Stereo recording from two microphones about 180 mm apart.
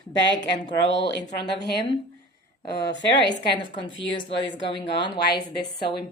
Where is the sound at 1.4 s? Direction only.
65° left (ahead or behind).